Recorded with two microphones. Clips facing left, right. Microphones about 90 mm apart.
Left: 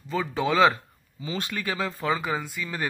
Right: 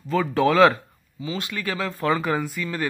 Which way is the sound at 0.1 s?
5° left (ahead or behind).